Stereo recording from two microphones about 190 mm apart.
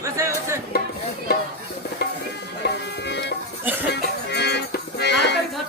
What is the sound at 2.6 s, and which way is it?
Music, 65° left (ahead or behind).